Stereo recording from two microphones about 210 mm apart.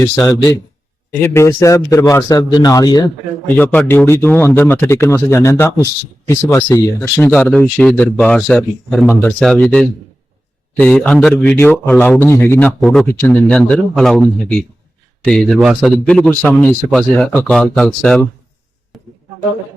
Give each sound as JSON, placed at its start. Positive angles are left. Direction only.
{"t": 1.2, "sound": "a man's voice", "side_deg": 10}
{"t": 3.5, "sound": "speech", "side_deg": 10}
{"t": 18.9, "sound": "a sound", "side_deg": 0}